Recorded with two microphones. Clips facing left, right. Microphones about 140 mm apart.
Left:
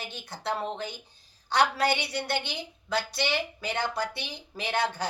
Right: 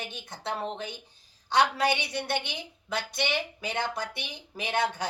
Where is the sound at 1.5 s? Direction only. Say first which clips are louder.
Even; 20° right (ahead or behind).